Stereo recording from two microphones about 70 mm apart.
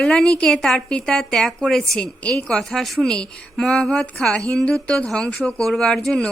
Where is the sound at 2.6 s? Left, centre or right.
Centre.